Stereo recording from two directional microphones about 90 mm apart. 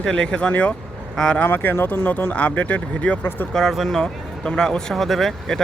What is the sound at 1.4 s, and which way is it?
Speech, 25° left (ahead or behind).